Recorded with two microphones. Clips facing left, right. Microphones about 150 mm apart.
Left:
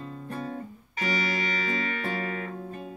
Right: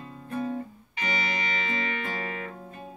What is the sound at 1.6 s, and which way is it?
Music, 40° left (ahead or behind).